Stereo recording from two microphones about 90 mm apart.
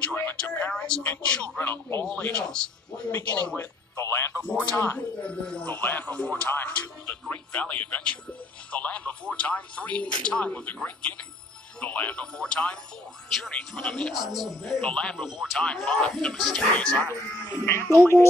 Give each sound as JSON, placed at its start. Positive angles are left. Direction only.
{"t": 0.0, "sound": "a sound", "side_deg": 20}
{"t": 1.0, "sound": "speech", "side_deg": 15}
{"t": 1.6, "sound": "a man's voice", "side_deg": 25}
{"t": 2.3, "sound": "speech", "side_deg": 10}
{"t": 3.5, "sound": "speech", "side_deg": 30}
{"t": 4.5, "sound": "speech", "side_deg": 15}
{"t": 15.2, "sound": "speech", "side_deg": -5}
{"t": 15.6, "sound": "speech", "side_deg": 10}
{"t": 17.6, "sound": "a man's voice", "side_deg": 30}